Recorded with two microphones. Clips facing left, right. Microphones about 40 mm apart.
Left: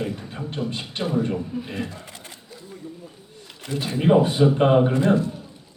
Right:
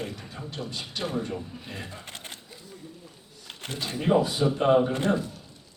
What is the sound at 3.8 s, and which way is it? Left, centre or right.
A man's voice, left.